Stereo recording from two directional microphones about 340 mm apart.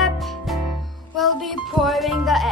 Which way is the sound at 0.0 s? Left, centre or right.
Centre.